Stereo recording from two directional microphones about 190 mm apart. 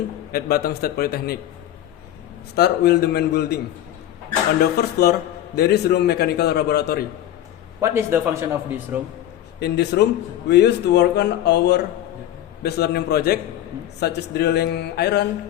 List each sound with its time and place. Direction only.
0.3 s a man's voice: 55° left (ahead or behind)
2.6 s a man's voice: 60° left (ahead or behind)
4.8 s a man's voice: 55° left (ahead or behind)
7.8 s a man's voice: 15° right (ahead or behind)
9.6 s a man's voice: 60° left (ahead or behind)